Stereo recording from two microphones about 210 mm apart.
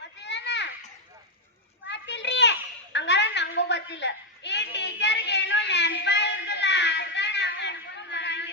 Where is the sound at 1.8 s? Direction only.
55° left (ahead or behind).